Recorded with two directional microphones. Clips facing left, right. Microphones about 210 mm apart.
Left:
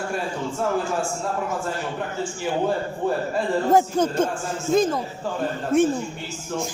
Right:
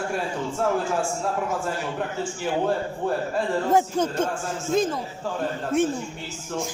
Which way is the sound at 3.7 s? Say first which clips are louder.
Left 3 dB; 40° left (ahead or behind).